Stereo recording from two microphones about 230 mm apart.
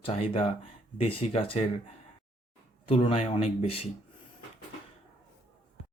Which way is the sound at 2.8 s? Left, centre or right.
Left.